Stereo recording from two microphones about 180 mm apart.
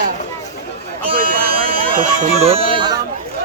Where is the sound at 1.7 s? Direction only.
50° right (ahead or behind).